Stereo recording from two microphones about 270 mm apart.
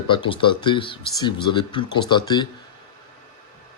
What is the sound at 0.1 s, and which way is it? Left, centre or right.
Speech, centre.